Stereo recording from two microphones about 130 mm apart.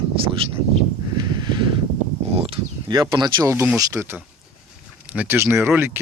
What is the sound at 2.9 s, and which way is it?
Speech, 30° right (ahead or behind).